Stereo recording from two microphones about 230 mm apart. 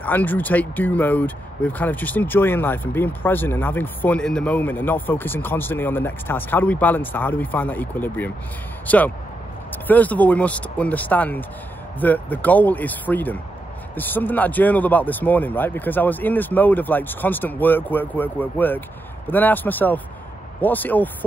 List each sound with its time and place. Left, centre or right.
0.0 s speech: centre